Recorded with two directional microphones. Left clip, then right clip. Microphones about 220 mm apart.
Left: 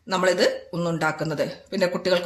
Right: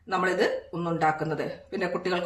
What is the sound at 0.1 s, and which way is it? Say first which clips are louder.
Speech: left 4 dB; 40° left (ahead or behind).